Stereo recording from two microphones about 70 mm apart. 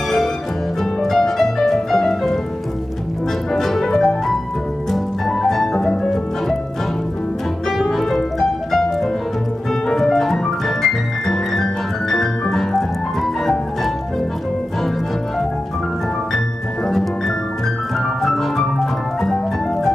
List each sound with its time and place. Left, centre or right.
1.0 s music: centre
3.5 s music: centre
7.7 s music: centre
18.2 s music: centre